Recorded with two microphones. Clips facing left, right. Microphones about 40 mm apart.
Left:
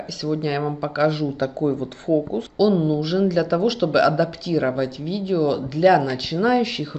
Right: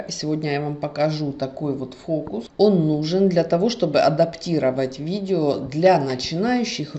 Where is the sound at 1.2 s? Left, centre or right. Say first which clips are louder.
Left 3 dB; left.